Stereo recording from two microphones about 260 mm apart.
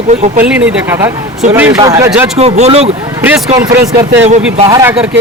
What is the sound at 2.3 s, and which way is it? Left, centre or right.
Speech, right.